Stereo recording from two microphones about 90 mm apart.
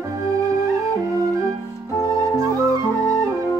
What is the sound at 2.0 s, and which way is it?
Music, 40° right (ahead or behind).